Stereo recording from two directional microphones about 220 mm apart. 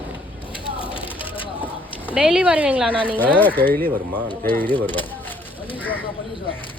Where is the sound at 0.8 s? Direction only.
25° left (ahead or behind).